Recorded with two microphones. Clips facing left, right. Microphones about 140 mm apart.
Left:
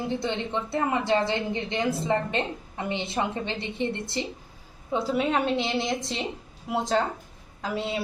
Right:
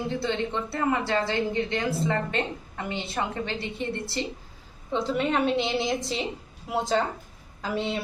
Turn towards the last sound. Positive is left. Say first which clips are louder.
# right 1 dB
turn(degrees=0)  # may be behind; listen again after turning